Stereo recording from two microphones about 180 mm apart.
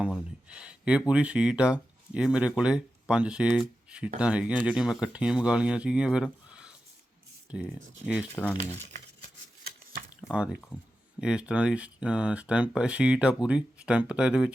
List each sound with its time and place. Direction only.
0.0 s speech: 5° right (ahead or behind)
8.4 s speech: 10° left (ahead or behind)
9.2 s a sound: 55° right (ahead or behind)
10.2 s drip: 5° right (ahead or behind)
11.2 s speech: 5° right (ahead or behind)